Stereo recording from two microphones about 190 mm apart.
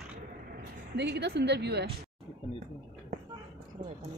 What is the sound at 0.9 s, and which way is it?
Speech, 60° right (ahead or behind).